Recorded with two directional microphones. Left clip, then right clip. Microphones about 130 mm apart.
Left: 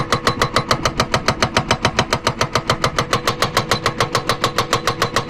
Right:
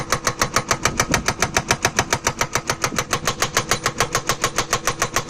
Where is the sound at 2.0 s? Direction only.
35° right (ahead or behind).